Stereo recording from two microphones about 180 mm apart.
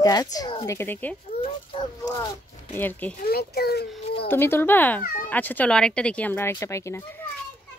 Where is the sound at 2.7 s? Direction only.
10° left (ahead or behind).